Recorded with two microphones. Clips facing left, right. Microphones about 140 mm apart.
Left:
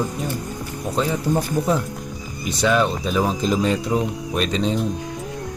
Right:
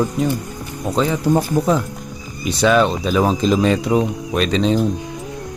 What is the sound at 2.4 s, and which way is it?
Speech, 90° right.